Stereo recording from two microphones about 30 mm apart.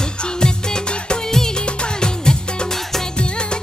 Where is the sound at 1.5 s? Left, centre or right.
Left.